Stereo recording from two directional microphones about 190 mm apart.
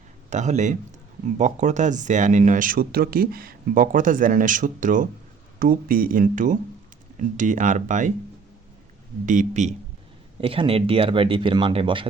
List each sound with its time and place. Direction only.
0.3 s speech: 40° right (ahead or behind)
9.2 s speech: 40° right (ahead or behind)